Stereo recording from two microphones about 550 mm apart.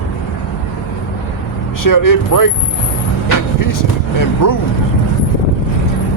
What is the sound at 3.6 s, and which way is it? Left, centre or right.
Speech, left.